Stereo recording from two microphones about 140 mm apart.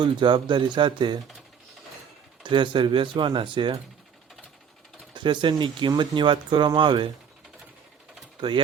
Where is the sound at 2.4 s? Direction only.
35° right (ahead or behind).